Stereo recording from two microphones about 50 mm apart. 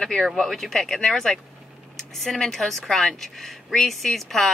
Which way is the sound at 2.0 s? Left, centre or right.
Centre.